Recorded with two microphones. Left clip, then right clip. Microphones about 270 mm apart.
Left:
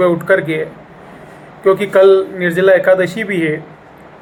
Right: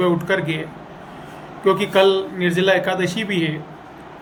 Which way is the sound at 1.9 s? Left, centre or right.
Centre.